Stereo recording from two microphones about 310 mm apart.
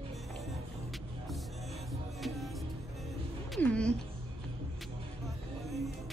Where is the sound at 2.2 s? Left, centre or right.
Centre.